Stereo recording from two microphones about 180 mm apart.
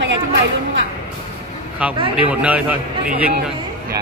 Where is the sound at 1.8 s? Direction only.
5° right (ahead or behind).